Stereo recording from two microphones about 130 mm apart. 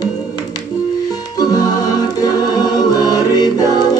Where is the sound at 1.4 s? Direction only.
30° left (ahead or behind).